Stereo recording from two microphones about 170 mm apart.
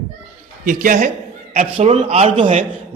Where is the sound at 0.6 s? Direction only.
50° right (ahead or behind).